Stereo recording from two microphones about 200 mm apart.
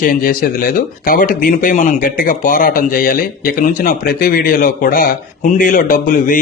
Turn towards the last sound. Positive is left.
turn(degrees=45)  # may be behind; listen again after turning